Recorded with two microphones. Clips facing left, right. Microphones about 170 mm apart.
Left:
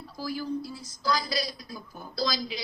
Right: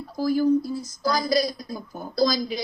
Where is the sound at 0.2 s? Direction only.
45° right (ahead or behind).